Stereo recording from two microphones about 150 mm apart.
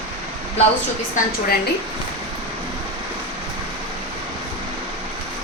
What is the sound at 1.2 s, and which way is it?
Speech, 60° left (ahead or behind).